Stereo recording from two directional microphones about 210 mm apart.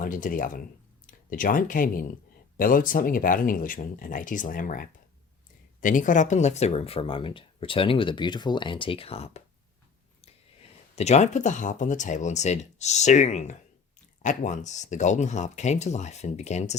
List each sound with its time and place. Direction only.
0.0 s speech: 40° left (ahead or behind)
10.9 s speech: 30° left (ahead or behind)